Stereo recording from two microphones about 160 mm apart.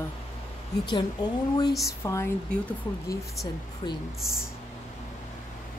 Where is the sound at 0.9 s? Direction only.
25° left (ahead or behind).